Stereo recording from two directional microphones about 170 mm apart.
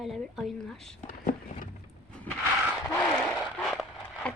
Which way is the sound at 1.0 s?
50° left (ahead or behind).